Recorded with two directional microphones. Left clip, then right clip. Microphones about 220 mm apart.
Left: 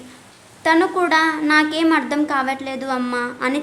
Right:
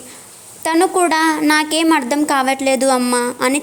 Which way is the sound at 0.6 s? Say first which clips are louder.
Right 2 dB; 30° right (ahead or behind).